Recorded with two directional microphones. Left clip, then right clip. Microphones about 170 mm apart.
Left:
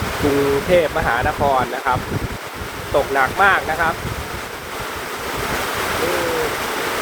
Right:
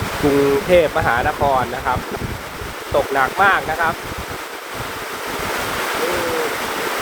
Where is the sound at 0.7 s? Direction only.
20° right (ahead or behind).